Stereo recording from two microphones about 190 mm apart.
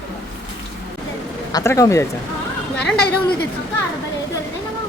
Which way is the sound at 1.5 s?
15° left (ahead or behind).